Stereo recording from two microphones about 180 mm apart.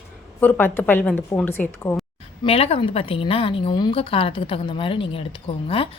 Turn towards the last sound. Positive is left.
turn(degrees=30)  # may be behind; listen again after turning